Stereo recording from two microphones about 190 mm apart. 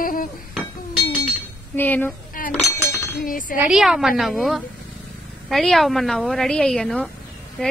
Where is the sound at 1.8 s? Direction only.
10° left (ahead or behind).